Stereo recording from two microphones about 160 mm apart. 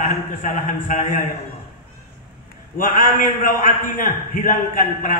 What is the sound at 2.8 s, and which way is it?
A man's voice, 55° left (ahead or behind).